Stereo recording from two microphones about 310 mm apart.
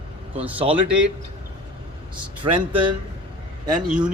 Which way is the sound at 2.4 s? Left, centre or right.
Centre.